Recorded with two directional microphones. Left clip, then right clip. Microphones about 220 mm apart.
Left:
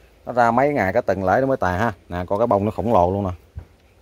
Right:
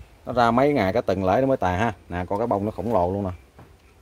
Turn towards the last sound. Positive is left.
turn(degrees=25)  # may be behind; listen again after turning